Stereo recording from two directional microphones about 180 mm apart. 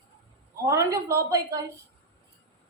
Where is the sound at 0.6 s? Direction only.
20° right (ahead or behind).